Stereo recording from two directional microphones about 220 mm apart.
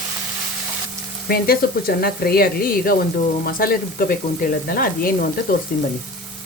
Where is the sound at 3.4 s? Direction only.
40° left (ahead or behind).